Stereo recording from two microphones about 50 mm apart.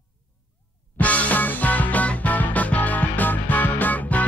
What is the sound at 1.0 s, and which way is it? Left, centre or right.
Music, left.